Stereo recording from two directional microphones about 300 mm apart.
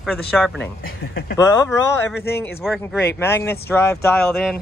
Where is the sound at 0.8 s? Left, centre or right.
Left.